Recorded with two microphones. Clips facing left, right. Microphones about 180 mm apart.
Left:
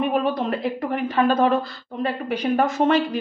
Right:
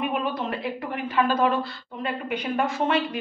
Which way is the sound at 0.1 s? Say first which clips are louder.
Left 5 dB; 40° left (ahead or behind).